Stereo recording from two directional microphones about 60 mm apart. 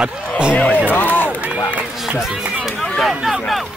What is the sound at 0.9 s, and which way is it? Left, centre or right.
Speech, left.